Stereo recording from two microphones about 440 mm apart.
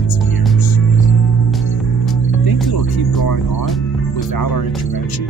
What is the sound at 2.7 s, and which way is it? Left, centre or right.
Speech, left.